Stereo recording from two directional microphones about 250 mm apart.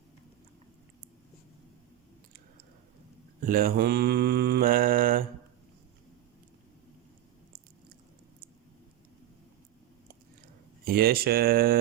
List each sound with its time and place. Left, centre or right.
3.4 s mantra: right
10.8 s mantra: right